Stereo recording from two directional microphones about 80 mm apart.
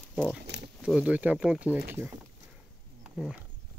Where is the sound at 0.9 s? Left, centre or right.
Centre.